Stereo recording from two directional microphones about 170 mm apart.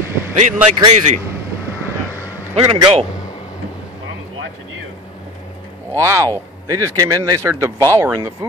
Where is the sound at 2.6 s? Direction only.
30° right (ahead or behind).